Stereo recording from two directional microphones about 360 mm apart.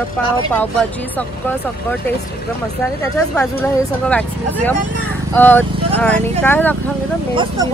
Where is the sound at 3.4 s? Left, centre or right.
Centre.